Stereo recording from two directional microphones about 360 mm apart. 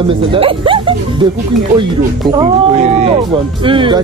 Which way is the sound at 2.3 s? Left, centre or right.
Centre.